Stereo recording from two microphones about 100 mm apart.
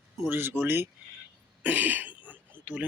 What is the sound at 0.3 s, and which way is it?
Speech, 20° right (ahead or behind).